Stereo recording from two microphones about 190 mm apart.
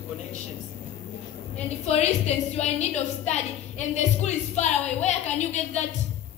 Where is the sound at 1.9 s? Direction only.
35° left (ahead or behind).